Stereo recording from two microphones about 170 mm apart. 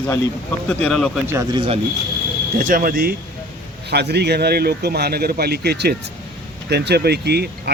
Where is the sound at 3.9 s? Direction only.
75° right (ahead or behind).